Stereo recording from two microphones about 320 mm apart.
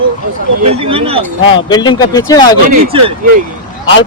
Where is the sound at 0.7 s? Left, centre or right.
Centre.